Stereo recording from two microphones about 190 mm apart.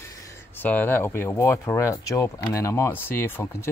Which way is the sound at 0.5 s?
10° left (ahead or behind).